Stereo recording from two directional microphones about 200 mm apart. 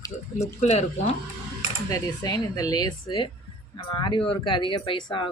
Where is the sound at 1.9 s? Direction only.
20° left (ahead or behind).